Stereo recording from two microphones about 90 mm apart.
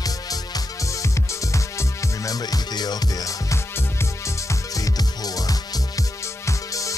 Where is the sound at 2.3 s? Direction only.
45° left (ahead or behind).